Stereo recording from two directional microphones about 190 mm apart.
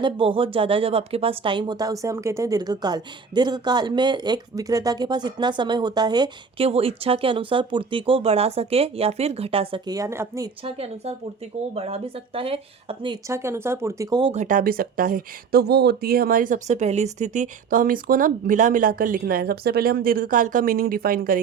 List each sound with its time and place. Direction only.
0.0 s speech: 25° right (ahead or behind)
10.6 s a woman's voice: 30° right (ahead or behind)
14.3 s speech: 45° right (ahead or behind)